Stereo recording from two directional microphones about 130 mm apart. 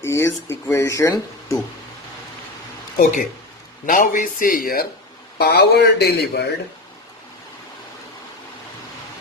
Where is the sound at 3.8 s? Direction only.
90° left.